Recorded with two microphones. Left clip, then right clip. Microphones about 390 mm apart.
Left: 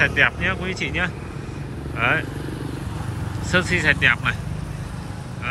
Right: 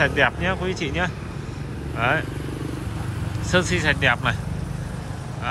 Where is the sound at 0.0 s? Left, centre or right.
Centre.